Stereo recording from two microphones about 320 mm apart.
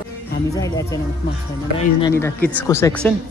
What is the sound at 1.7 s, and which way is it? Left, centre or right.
Speech, centre.